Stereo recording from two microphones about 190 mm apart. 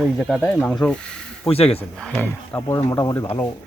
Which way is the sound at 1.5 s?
30° left (ahead or behind).